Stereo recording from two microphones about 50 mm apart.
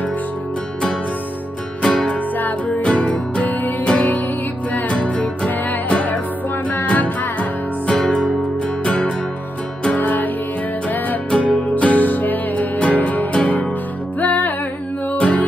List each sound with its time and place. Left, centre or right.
1.8 s music: centre
9.9 s music: left
11.2 s music: left
15.1 s music: left